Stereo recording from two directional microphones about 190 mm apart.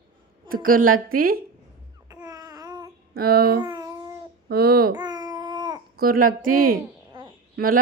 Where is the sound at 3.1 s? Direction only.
50° right (ahead or behind).